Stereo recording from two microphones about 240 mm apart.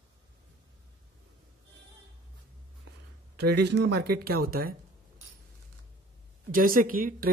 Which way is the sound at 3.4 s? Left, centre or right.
Right.